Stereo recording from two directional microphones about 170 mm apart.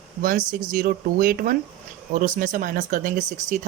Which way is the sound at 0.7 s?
55° right (ahead or behind).